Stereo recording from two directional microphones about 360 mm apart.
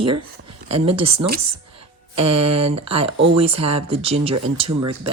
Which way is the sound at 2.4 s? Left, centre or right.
Centre.